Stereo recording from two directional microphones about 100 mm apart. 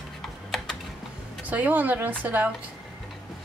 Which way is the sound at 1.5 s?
15° right (ahead or behind).